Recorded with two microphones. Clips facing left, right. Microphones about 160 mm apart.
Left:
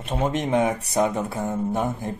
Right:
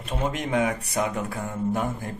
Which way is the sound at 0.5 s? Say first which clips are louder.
Left 3 dB; 30° left (ahead or behind).